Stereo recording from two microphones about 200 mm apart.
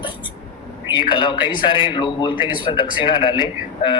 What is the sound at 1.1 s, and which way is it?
Speech, 25° left (ahead or behind).